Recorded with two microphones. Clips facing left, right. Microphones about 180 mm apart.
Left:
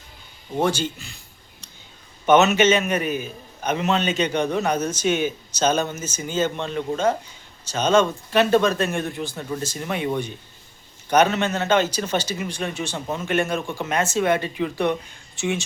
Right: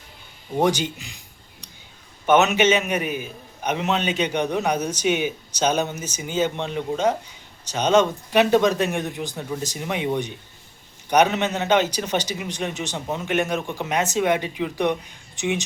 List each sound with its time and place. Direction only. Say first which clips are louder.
0.5 s a man's voice: right 1 dB; 15° right (ahead or behind)
2.2 s a man's voice: left 1 dB; 10° right (ahead or behind)